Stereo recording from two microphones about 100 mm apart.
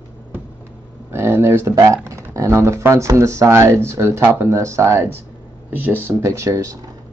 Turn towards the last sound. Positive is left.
turn(degrees=-30)  # may be behind; listen again after turning